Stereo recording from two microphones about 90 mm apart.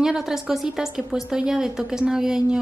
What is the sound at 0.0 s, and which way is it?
A woman's voice, 5° right (ahead or behind).